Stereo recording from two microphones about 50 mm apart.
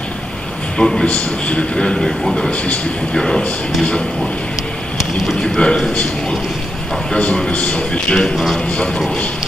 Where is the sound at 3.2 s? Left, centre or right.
Centre.